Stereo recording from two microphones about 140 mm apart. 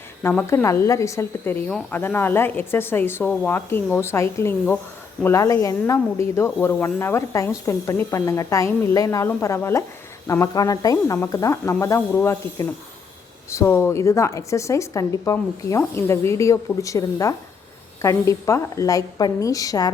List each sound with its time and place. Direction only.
0.2 s a woman's voice: 15° left (ahead or behind)